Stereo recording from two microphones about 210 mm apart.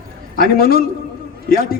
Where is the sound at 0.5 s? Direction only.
45° left (ahead or behind).